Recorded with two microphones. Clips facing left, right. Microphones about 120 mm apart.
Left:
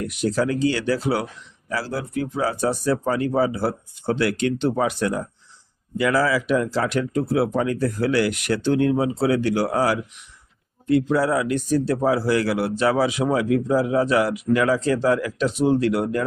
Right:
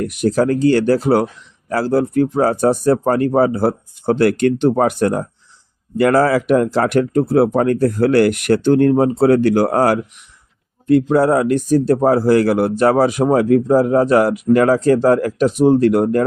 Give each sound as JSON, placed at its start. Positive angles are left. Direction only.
{"t": 0.0, "sound": "speech", "side_deg": -50}